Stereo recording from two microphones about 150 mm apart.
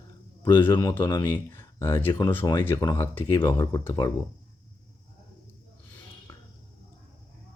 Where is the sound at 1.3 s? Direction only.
15° left (ahead or behind).